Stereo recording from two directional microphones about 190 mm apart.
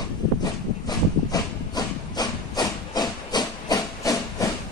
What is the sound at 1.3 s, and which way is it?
Hiss, 20° left (ahead or behind).